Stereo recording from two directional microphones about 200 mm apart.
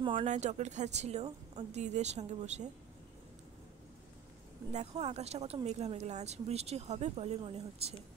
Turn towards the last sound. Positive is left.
turn(degrees=-30)  # may be behind; listen again after turning